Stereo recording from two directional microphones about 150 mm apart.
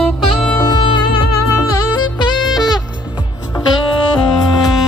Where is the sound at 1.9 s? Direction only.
30° left (ahead or behind).